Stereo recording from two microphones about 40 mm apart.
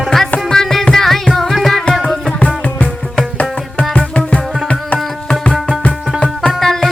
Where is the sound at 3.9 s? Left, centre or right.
Left.